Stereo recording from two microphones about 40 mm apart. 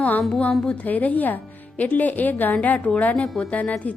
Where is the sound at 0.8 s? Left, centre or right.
Left.